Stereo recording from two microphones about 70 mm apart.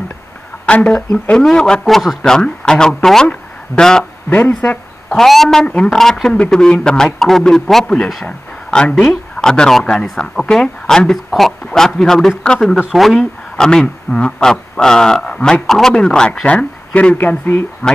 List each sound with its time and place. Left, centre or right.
0.7 s speech: centre
1.4 s speech: centre
4.3 s speech: left
5.1 s speech: centre
8.6 s speech: centre